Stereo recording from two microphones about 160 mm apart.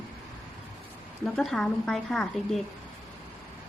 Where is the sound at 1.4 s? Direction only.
5° left (ahead or behind).